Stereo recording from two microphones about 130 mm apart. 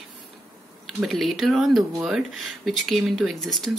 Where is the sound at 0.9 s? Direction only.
Centre (ahead or behind).